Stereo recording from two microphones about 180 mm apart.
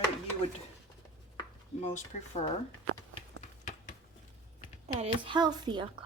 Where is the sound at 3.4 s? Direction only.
45° left (ahead or behind).